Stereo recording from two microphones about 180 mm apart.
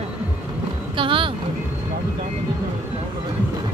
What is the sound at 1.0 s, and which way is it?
Speech, 30° right (ahead or behind).